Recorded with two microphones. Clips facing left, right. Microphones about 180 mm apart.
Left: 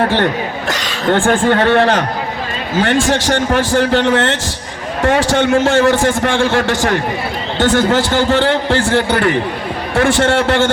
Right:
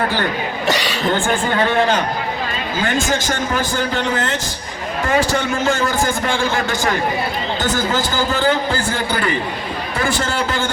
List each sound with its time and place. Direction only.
0.7 s speech: centre (ahead or behind)
1.1 s a man's voice: 80° left
9.9 s a man's voice: 85° left